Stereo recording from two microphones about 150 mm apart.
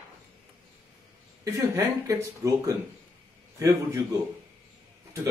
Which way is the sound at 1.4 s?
20° right (ahead or behind).